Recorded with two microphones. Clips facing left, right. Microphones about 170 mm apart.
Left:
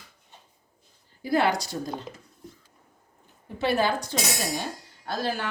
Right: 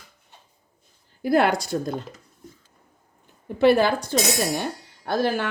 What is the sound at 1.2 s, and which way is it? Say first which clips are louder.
Speech: right 4 dB; 55° right (ahead or behind).